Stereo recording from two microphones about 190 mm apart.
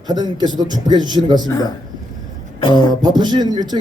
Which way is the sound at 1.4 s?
20° left (ahead or behind).